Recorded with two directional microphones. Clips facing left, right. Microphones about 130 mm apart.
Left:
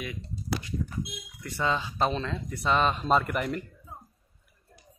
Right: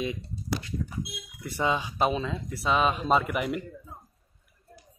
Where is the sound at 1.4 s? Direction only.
15° right (ahead or behind).